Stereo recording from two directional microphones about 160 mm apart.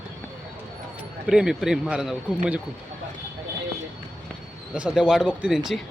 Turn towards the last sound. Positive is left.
turn(degrees=0)  # may be behind; listen again after turning